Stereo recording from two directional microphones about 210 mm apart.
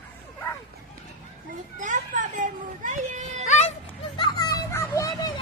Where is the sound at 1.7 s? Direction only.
35° right (ahead or behind).